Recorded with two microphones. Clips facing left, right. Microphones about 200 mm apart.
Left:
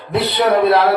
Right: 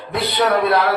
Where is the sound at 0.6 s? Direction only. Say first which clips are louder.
Left 4 dB; 25° left (ahead or behind).